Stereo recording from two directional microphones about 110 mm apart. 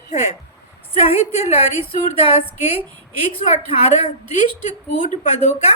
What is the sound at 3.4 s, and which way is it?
Speech, 75° left (ahead or behind).